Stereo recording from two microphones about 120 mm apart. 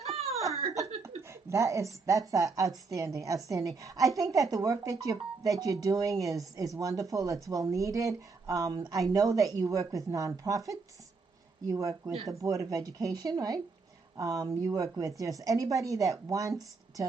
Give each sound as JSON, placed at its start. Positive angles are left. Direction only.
{"t": 0.2, "sound": "laughter", "side_deg": -65}
{"t": 1.0, "sound": "a woman's voice", "side_deg": -25}